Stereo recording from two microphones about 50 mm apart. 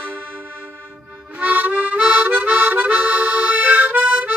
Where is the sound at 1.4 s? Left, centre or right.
Right.